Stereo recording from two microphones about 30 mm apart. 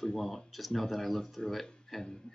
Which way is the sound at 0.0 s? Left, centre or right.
Centre.